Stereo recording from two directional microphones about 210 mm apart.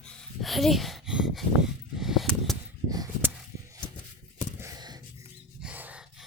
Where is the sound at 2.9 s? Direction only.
15° right (ahead or behind).